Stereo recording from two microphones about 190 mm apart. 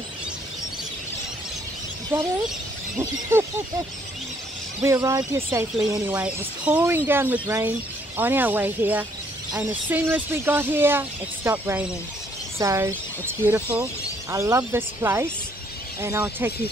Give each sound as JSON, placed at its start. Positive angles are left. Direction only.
{"t": 3.0, "sound": "speech", "side_deg": -15}
{"t": 4.8, "sound": "speech", "side_deg": -15}